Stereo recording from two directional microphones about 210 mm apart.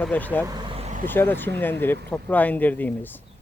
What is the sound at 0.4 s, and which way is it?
Vehicle, 20° right (ahead or behind).